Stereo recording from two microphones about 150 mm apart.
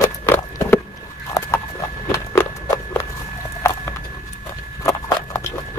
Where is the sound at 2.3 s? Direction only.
15° left (ahead or behind).